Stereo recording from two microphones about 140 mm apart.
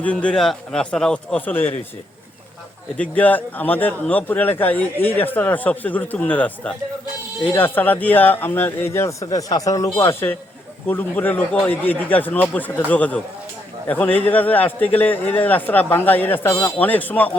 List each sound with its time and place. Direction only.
0.0 s speech: 10° left (ahead or behind)
3.0 s speech: 10° left (ahead or behind)